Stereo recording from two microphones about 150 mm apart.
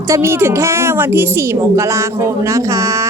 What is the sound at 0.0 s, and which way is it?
A woman's voice, 15° right (ahead or behind).